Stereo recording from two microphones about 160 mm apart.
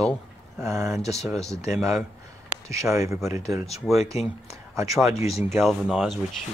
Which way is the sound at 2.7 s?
20° right (ahead or behind).